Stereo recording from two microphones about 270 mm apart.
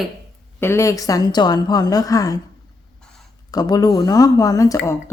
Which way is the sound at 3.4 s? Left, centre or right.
Centre.